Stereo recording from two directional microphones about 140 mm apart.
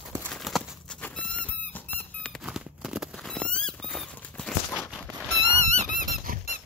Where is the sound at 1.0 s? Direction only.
5° left (ahead or behind).